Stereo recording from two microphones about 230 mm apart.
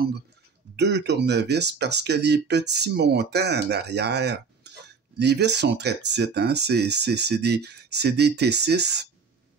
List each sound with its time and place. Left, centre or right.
0.7 s speech: right